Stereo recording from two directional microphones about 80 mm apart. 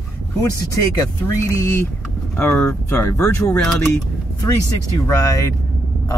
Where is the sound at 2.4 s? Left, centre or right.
Left.